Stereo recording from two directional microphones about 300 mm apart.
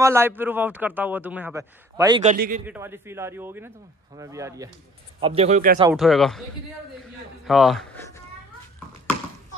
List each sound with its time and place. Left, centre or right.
0.0 s a man's voice: centre
2.2 s a man's voice: right
2.6 s a man's voice: centre; by 5.8 s right
5.9 s speech: centre
7.4 s a sound: centre